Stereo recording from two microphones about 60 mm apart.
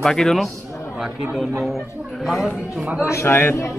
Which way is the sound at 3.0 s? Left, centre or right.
Left.